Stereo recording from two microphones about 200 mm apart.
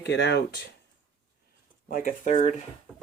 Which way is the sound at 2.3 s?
25° left (ahead or behind).